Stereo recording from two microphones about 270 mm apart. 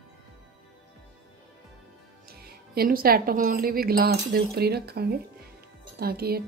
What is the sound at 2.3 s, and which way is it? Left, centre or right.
A woman's voice, right.